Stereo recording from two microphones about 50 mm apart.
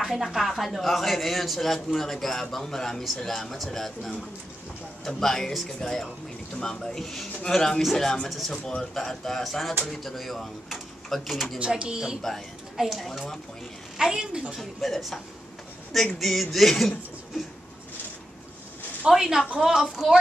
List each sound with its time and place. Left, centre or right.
0.0 s speech: centre
8.6 s speech: centre
11.8 s speech: centre
12.7 s speech: centre
13.9 s a woman's voice: centre
14.6 s speech: centre
16.2 s speech: centre
19.0 s a woman's voice: centre